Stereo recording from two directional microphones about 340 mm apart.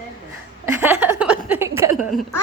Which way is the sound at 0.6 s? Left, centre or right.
Centre.